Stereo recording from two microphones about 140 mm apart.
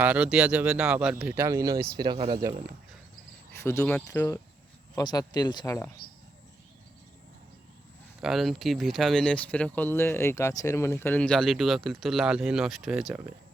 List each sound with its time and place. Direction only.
0.0 s speech: 10° right (ahead or behind)
2.0 s speech: 35° right (ahead or behind)
3.6 s speech: 20° left (ahead or behind)
4.9 s speech: 30° left (ahead or behind)
6.0 s speech: 90° left
8.2 s speech: centre (ahead or behind)